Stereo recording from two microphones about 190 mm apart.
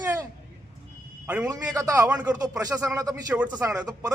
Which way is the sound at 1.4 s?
20° right (ahead or behind).